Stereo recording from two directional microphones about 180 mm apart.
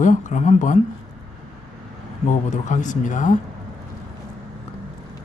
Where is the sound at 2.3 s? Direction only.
40° left (ahead or behind).